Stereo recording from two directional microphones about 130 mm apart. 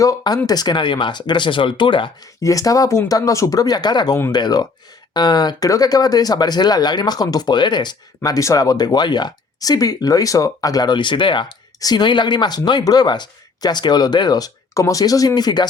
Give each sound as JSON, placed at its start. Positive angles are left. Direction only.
{"t": 0.0, "sound": "speech", "side_deg": 25}
{"t": 2.4, "sound": "speech", "side_deg": 25}